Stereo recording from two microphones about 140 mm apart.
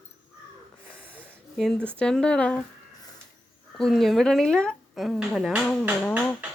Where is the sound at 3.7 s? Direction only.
5° left (ahead or behind).